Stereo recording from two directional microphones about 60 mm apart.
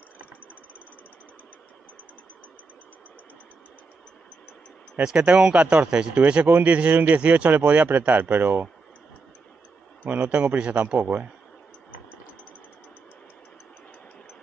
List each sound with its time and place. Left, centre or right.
4.9 s speech: centre; by 8.6 s right
10.2 s speech: centre